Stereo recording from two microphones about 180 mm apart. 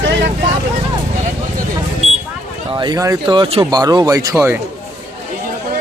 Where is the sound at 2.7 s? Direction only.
20° right (ahead or behind).